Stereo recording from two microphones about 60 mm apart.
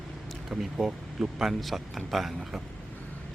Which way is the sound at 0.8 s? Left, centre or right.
Centre.